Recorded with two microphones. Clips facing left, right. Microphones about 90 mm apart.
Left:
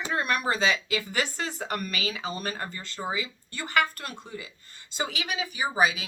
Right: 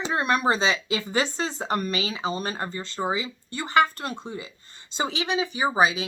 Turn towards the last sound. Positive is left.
turn(degrees=-30)  # may be behind; listen again after turning